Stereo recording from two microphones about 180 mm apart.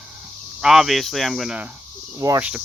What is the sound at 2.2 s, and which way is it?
Speech, 20° right (ahead or behind).